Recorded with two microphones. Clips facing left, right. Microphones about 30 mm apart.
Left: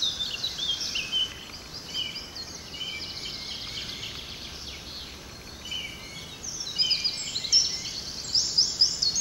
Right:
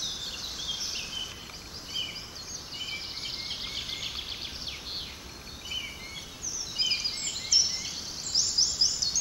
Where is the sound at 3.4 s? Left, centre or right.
Centre.